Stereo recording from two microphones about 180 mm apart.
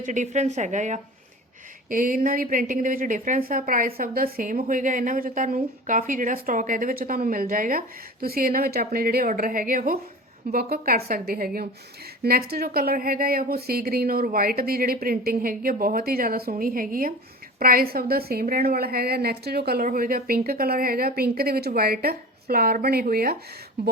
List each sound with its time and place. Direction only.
0.0 s a woman's voice: 45° right (ahead or behind)